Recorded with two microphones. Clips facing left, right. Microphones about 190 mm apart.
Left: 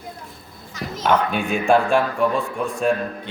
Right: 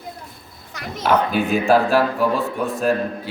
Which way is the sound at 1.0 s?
Centre (ahead or behind).